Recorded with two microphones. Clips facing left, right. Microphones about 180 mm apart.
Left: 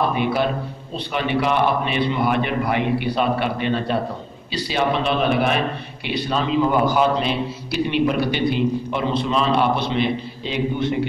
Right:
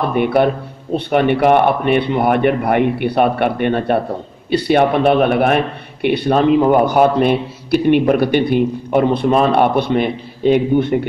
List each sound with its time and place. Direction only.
0.1 s a man's voice: 60° right (ahead or behind)